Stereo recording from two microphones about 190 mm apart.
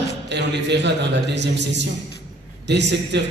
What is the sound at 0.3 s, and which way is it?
A man's voice, 65° right (ahead or behind).